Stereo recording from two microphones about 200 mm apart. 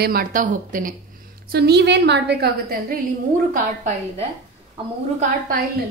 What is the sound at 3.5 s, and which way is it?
Speech, 35° right (ahead or behind).